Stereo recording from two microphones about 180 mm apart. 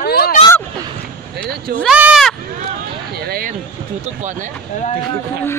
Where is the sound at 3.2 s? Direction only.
55° right (ahead or behind).